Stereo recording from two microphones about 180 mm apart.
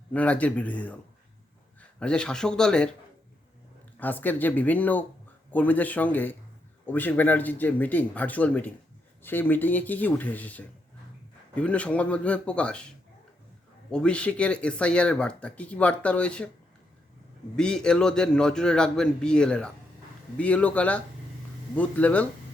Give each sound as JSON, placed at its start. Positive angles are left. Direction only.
{"t": 0.1, "sound": "a man's voice", "side_deg": 10}
{"t": 4.0, "sound": "speech", "side_deg": 10}
{"t": 13.9, "sound": "speech", "side_deg": 5}
{"t": 17.6, "sound": "a man's voice", "side_deg": 5}